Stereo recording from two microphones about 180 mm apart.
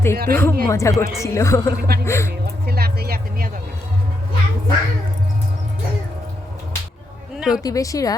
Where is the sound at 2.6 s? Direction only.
60° right (ahead or behind).